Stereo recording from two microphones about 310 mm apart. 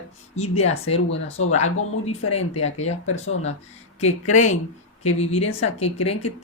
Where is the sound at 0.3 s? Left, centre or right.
Left.